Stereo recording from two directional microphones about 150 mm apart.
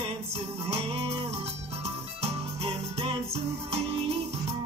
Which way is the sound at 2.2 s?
40° right (ahead or behind).